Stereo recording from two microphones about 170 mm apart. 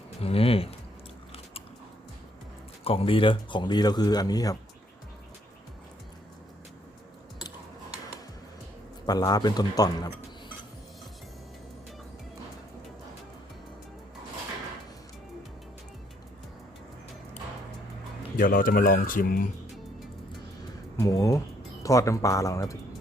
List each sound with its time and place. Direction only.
0.2 s speech: 35° left (ahead or behind)
2.8 s speech: 35° left (ahead or behind)
9.0 s speech: 25° left (ahead or behind)
18.3 s speech: 55° left (ahead or behind)
21.0 s speech: 20° left (ahead or behind)